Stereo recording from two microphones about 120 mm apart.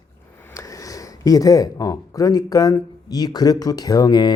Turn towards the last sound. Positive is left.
turn(degrees=35)  # may be behind; listen again after turning